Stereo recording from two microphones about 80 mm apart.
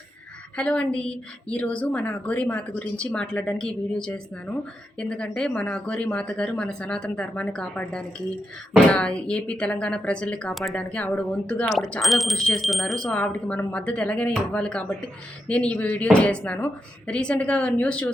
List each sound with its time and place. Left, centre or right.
0.5 s a woman's voice: centre
10.5 s speech: centre
10.8 s a woman's voice: centre
11.9 s a woman's voice: centre